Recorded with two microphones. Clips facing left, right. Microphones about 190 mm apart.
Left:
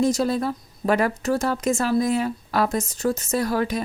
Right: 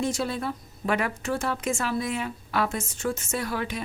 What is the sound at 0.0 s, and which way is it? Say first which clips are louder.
A woman's voice: left 7 dB; 40° left (ahead or behind).